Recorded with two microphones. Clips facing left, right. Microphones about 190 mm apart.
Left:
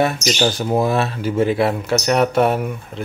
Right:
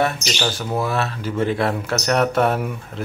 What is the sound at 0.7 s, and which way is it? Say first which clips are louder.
Speech: left 4 dB; 15° left (ahead or behind).